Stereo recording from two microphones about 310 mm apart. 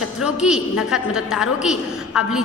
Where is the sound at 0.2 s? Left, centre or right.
Centre.